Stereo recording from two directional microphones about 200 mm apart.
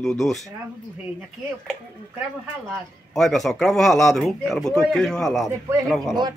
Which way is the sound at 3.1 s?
Centre (ahead or behind).